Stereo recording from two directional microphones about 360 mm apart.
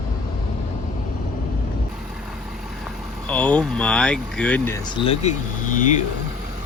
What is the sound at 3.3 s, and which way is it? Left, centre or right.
Speech, centre.